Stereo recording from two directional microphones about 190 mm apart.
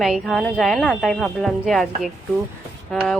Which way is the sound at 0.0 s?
Centre (ahead or behind).